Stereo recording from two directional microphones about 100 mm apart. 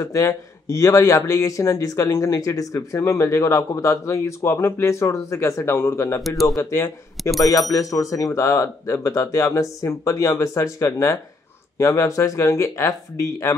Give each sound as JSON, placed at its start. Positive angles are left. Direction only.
{"t": 0.0, "sound": "speech", "side_deg": 30}
{"t": 7.2, "sound": "speech", "side_deg": 0}
{"t": 7.7, "sound": "speech", "side_deg": 30}